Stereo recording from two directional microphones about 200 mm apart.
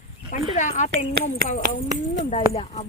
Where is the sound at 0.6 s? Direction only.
40° left (ahead or behind).